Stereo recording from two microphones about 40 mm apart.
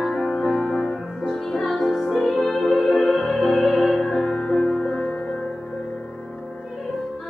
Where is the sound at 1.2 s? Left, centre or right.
Centre.